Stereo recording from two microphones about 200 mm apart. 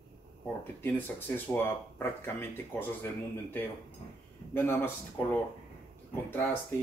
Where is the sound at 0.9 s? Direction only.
10° left (ahead or behind).